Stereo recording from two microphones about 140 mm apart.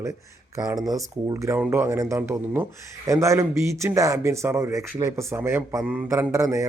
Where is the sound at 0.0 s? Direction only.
20° right (ahead or behind).